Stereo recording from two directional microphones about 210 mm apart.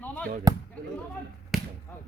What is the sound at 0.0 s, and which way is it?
Basketball bounce, 5° left (ahead or behind).